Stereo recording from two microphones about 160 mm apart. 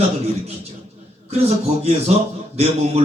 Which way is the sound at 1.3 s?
40° right (ahead or behind).